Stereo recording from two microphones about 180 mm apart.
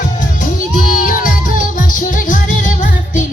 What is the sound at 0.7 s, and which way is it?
Music, 50° left (ahead or behind).